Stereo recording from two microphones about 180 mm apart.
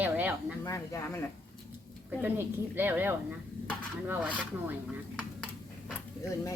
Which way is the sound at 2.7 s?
10° right (ahead or behind).